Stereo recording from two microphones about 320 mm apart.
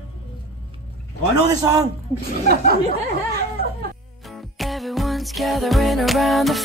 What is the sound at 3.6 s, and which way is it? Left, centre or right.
Music, right.